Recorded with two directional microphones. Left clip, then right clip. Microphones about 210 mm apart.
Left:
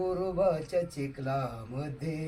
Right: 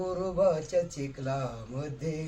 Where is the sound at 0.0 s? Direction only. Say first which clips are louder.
Right 1 dB; 15° right (ahead or behind).